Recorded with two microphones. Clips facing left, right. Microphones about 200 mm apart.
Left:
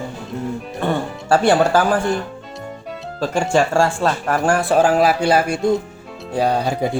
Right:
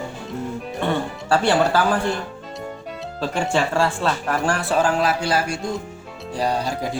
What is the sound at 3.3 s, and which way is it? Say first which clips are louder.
Speech: left 4 dB; 45° left (ahead or behind).